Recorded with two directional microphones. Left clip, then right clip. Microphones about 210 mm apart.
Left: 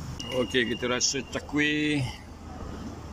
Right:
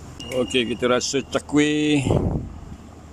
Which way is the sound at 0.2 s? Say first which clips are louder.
Right 4 dB; 10° right (ahead or behind).